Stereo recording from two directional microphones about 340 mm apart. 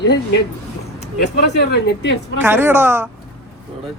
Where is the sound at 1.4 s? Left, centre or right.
Left.